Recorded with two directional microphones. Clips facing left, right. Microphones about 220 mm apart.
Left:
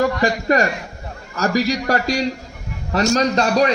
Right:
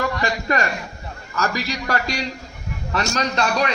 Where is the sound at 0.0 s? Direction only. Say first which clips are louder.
Left 5 dB; 35° left (ahead or behind).